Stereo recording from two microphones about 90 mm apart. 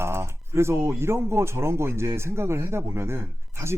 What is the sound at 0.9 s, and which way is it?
A man's voice, 30° right (ahead or behind).